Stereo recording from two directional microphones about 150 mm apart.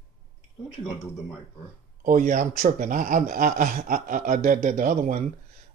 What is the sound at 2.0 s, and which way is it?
Speech, 60° right (ahead or behind).